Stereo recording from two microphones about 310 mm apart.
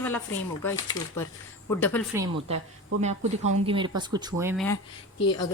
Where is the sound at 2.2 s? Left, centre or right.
Centre.